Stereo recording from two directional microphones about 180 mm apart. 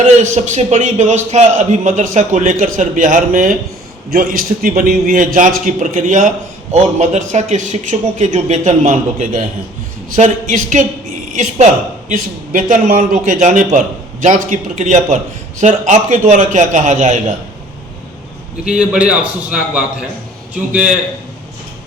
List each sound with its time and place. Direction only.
0.2 s a man's voice: 40° right (ahead or behind)
18.6 s a man's voice: 5° right (ahead or behind)